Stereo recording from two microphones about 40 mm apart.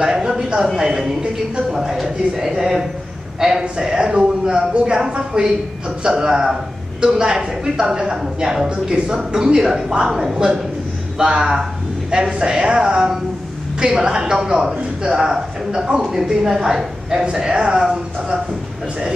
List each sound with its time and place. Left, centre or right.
0.0 s a man's voice: centre
3.6 s a man's voice: right
8.6 s a man's voice: right